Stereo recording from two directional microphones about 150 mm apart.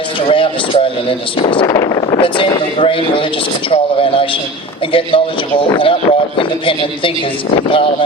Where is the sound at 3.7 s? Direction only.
35° left (ahead or behind).